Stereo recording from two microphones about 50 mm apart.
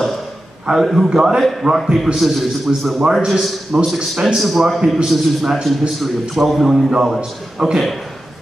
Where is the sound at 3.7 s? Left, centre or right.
Centre.